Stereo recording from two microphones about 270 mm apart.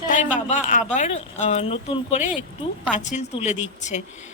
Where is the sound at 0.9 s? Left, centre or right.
Left.